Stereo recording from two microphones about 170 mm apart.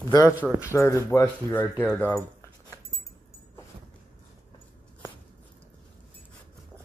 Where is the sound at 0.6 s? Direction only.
15° left (ahead or behind).